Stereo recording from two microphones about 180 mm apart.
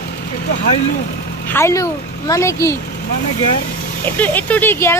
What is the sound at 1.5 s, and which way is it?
Speech, 15° left (ahead or behind).